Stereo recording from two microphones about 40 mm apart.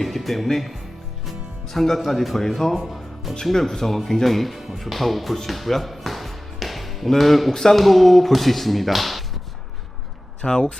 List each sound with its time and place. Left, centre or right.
0.0 s speech: centre
5.5 s music: centre
7.5 s speech: centre
10.4 s speech: left